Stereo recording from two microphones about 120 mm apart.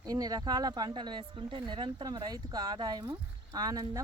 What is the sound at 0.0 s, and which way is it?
Speech, 30° right (ahead or behind).